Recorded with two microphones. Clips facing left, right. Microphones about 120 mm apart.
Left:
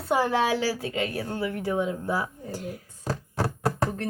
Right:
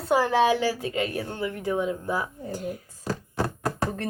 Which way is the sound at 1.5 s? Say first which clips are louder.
Even; 20° right (ahead or behind).